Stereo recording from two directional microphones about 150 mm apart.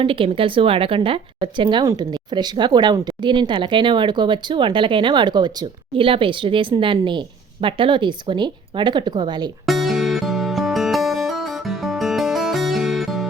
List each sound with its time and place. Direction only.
0.0 s a woman's voice: 35° right (ahead or behind)
9.6 s music: centre (ahead or behind)